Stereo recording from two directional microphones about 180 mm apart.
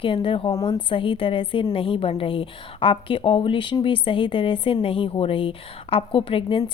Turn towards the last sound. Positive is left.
turn(degrees=30)  # may be behind; listen again after turning